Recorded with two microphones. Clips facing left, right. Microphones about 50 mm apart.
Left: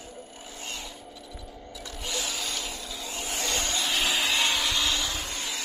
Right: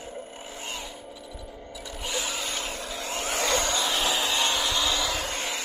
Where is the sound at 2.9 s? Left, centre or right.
Right.